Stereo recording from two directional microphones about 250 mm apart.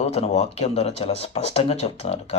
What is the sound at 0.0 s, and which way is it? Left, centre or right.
Speech, left.